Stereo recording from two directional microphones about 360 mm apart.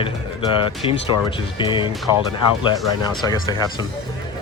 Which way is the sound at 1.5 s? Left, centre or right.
Centre.